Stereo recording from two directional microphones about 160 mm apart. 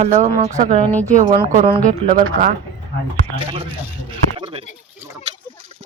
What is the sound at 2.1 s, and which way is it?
Speech, 55° right (ahead or behind).